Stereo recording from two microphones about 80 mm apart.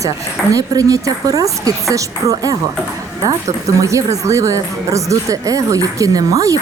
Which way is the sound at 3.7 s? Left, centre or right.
Right.